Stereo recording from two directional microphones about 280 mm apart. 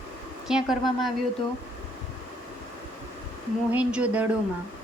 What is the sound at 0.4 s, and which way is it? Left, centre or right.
Speech, centre.